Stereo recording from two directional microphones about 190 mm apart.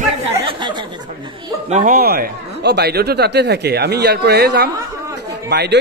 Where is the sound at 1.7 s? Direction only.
45° right (ahead or behind).